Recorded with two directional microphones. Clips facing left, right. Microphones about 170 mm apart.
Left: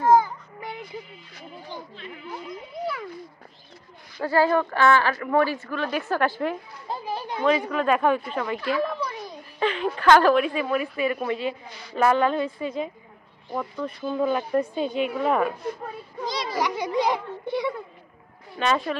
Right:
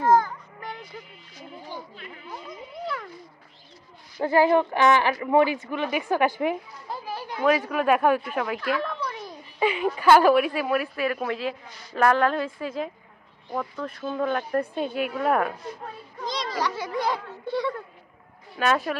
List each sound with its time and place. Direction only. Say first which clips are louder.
0.0 s a sound: left 2 dB; 10° left (ahead or behind)
4.2 s speech: right 2 dB; 20° right (ahead or behind)
6.9 s a child's voice: left 3 dB; 20° left (ahead or behind)
7.4 s a woman's voice: right 1 dB; 10° right (ahead or behind)
16.3 s a sound: left 1 dB; 10° left (ahead or behind)
18.6 s speech: even; 5° right (ahead or behind)